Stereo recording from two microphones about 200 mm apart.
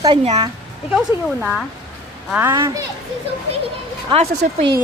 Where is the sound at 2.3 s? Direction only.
10° right (ahead or behind).